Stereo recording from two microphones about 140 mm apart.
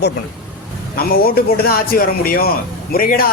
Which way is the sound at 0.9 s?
90° left.